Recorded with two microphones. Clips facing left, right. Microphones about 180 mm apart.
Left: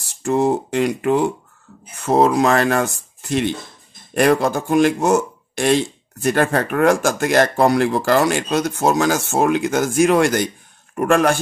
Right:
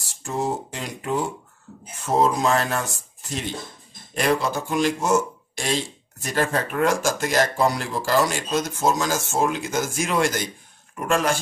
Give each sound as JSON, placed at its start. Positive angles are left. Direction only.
{"t": 0.2, "sound": "speech", "side_deg": 65}